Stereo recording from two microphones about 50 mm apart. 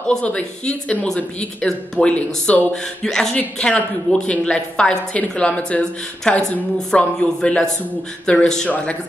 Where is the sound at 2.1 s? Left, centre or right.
Left.